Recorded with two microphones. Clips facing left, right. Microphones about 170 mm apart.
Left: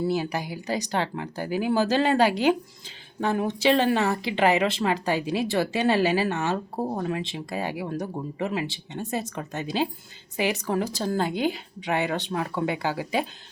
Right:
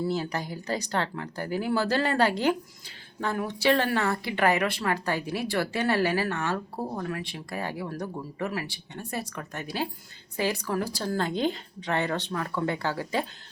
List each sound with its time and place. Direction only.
0.0 s speech: 15° left (ahead or behind)